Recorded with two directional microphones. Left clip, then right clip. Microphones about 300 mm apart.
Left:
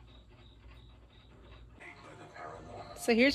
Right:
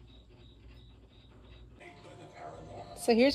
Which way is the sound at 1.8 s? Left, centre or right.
Centre.